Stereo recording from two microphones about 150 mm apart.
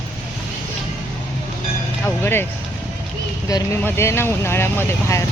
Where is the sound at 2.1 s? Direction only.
15° left (ahead or behind).